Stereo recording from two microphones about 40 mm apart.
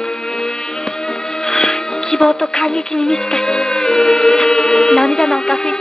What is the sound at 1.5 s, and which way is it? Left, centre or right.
Music, centre.